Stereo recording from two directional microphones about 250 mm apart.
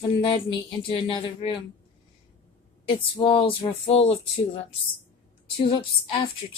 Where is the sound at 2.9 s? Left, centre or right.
Centre.